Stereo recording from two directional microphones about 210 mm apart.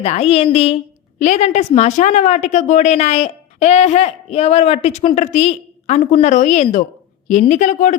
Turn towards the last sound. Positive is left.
turn(degrees=35)  # may be behind; listen again after turning